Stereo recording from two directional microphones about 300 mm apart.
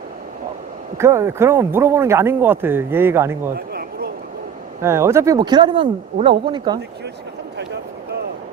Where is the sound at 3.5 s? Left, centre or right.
Right.